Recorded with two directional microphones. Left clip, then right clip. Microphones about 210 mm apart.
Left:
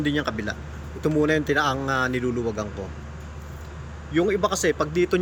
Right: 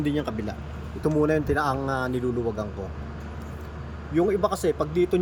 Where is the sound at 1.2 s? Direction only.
20° left (ahead or behind).